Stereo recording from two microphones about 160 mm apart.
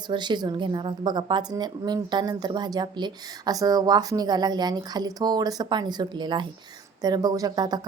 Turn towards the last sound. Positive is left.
turn(degrees=-25)  # may be behind; listen again after turning